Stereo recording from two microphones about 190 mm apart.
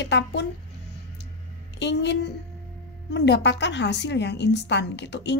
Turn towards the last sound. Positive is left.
turn(degrees=65)  # may be behind; listen again after turning